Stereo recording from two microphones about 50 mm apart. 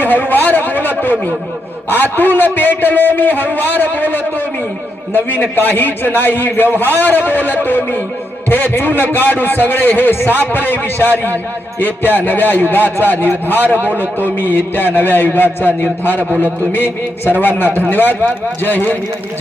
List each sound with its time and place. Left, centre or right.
0.0 s a man's voice: left
1.9 s a man's voice: left